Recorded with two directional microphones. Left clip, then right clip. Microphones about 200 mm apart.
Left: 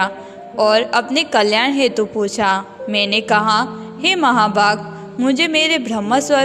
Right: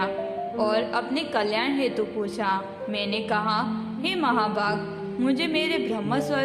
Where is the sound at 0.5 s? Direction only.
40° left (ahead or behind).